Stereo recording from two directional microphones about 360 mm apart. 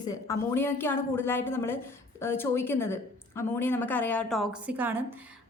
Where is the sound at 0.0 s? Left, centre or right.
Centre.